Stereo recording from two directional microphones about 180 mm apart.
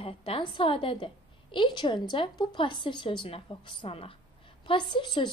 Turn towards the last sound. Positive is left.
turn(degrees=25)  # may be behind; listen again after turning